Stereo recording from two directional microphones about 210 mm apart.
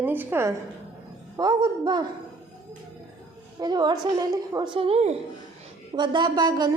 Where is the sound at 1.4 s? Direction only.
20° right (ahead or behind).